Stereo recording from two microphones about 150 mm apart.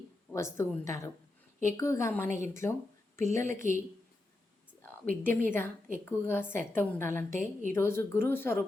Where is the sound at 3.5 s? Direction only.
60° right (ahead or behind).